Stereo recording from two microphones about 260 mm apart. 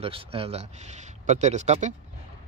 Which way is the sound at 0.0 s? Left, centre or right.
Right.